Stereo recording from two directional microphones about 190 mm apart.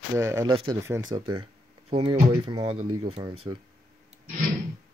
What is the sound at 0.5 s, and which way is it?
Speech, 25° right (ahead or behind).